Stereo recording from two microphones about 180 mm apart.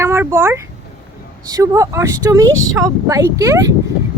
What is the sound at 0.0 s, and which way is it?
Speech, 15° right (ahead or behind).